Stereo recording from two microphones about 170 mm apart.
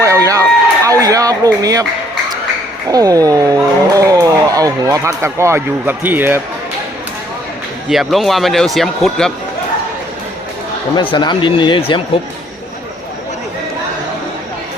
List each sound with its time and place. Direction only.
0.0 s a sound: 20° right (ahead or behind)
2.9 s speech: 20° right (ahead or behind)
7.9 s speech: centre (ahead or behind)
11.1 s speech: 25° left (ahead or behind)